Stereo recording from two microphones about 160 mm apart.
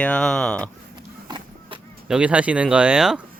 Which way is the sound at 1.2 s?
25° right (ahead or behind).